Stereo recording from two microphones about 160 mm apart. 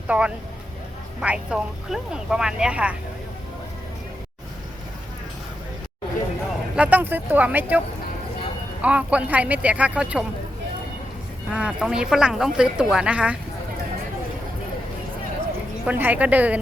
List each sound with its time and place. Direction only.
0.1 s a woman's voice: 5° right (ahead or behind)
6.7 s speech: 10° right (ahead or behind)
8.8 s speech: 5° right (ahead or behind)
11.5 s a woman's voice: 5° right (ahead or behind)
15.9 s speech: 10° right (ahead or behind)